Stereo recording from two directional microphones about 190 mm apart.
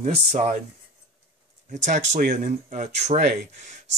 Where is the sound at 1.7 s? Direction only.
40° right (ahead or behind).